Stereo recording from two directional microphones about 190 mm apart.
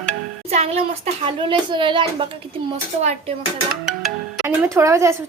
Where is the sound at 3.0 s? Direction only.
35° right (ahead or behind).